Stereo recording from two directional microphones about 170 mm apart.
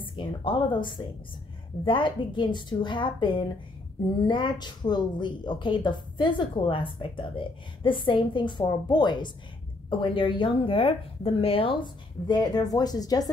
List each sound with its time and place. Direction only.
0.0 s a woman's voice: 30° left (ahead or behind)
12.3 s a woman's voice: 25° left (ahead or behind)